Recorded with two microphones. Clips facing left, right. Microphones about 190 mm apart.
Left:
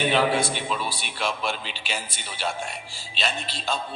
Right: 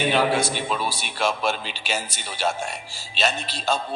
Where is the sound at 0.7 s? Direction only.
40° right (ahead or behind).